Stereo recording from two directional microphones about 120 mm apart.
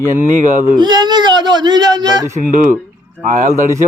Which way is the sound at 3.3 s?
85° right.